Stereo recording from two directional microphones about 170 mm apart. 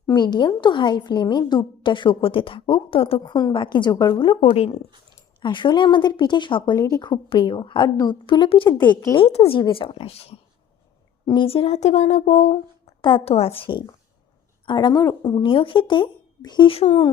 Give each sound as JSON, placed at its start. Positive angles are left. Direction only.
{"t": 0.1, "sound": "a woman's voice", "side_deg": 25}
{"t": 9.1, "sound": "speech", "side_deg": 35}
{"t": 13.0, "sound": "a woman's voice", "side_deg": 30}